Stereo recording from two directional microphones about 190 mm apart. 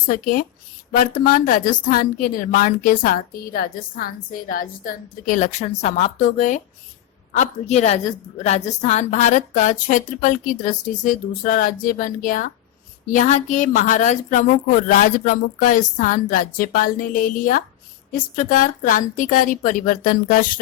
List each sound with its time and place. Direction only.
0.1 s a woman's voice: 50° left (ahead or behind)